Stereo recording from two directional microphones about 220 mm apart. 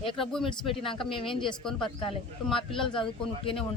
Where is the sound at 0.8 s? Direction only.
25° left (ahead or behind).